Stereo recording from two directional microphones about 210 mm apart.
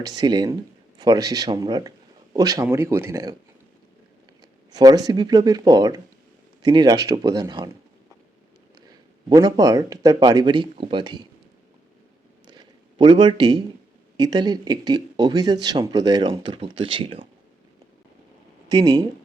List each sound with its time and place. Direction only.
0.0 s speech: 20° right (ahead or behind)
4.7 s speech: 20° right (ahead or behind)
8.9 s speech: 20° right (ahead or behind)
12.5 s a sound: 20° right (ahead or behind)
14.2 s speech: 20° right (ahead or behind)
18.7 s speech: 20° right (ahead or behind)